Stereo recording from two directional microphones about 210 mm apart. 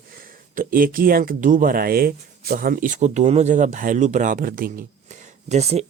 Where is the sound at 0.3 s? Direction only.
40° right (ahead or behind).